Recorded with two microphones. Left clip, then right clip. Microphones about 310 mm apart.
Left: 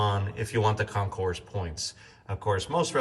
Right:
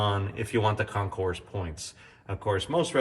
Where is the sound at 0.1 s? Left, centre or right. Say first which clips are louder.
Right 1 dB; centre.